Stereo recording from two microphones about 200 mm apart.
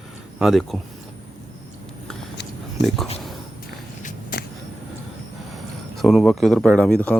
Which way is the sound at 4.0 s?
40° left (ahead or behind).